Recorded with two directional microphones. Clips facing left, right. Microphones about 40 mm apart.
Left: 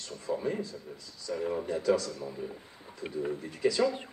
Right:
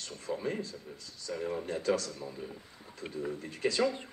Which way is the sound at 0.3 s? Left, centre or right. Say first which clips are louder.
Left 3 dB; centre.